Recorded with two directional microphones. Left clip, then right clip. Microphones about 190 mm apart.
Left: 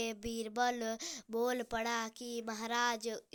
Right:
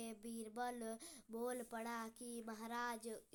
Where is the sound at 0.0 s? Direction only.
25° left (ahead or behind).